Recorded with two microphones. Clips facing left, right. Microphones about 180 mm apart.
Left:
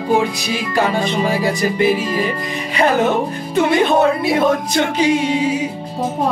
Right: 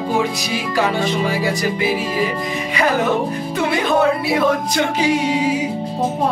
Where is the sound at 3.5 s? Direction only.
25° left (ahead or behind).